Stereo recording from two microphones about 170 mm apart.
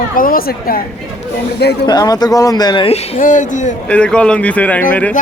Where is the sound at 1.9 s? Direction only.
20° left (ahead or behind); by 3.2 s 35° left (ahead or behind).